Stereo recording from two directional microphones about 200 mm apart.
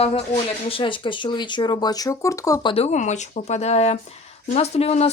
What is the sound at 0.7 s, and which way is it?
Speech, 25° left (ahead or behind).